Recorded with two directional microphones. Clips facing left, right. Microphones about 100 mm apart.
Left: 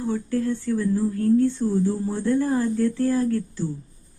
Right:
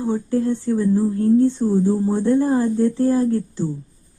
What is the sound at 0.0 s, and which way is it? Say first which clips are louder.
Speech: right 4 dB; 20° right (ahead or behind).